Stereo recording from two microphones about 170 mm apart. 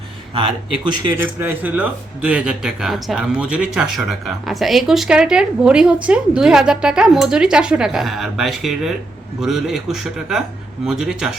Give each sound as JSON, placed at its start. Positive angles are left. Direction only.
{"t": 0.3, "sound": "speech", "side_deg": -30}
{"t": 1.1, "sound": "speech", "side_deg": -15}